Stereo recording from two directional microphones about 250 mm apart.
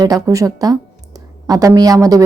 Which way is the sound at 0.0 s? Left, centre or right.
Centre.